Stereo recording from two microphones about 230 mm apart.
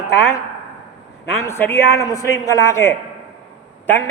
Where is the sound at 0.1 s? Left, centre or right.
Centre.